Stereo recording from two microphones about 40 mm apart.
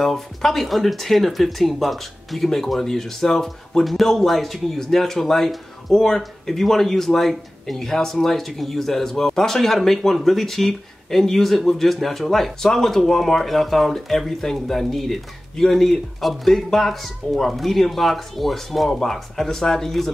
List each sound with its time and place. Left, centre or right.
0.0 s speech: centre